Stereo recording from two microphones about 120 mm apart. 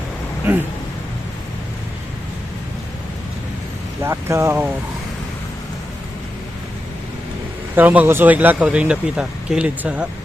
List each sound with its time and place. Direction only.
4.0 s speech: 20° right (ahead or behind)
7.8 s speech: 15° right (ahead or behind)